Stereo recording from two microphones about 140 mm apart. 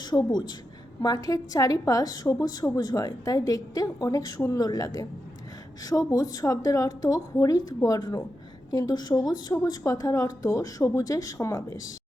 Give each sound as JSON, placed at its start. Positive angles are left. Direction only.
{"t": 0.0, "sound": "a woman's voice", "side_deg": 30}